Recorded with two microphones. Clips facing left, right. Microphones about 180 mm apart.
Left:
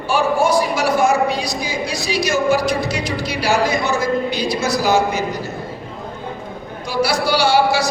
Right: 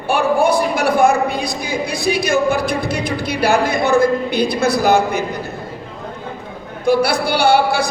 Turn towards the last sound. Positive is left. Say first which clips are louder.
# right 1 dB
turn(degrees=-55)  # may be behind; listen again after turning